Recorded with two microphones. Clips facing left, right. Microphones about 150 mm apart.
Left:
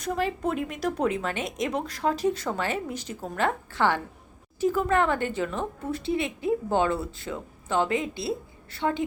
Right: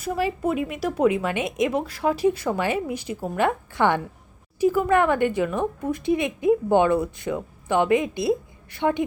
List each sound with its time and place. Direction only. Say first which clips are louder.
0.0 s a woman's voice: right 3 dB; 10° right (ahead or behind)